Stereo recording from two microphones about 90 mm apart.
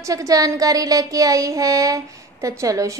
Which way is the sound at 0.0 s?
40° right (ahead or behind).